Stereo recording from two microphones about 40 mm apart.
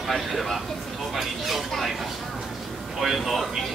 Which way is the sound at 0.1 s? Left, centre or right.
Centre.